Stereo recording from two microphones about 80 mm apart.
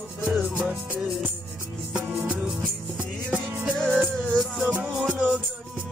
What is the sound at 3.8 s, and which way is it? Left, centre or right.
Music, centre.